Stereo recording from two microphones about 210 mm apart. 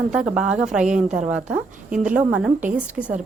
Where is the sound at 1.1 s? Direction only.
35° right (ahead or behind).